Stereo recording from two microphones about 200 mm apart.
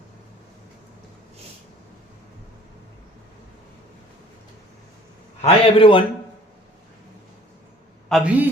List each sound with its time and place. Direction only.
5.4 s a man's voice: 25° left (ahead or behind)
8.1 s a man's voice: 5° right (ahead or behind)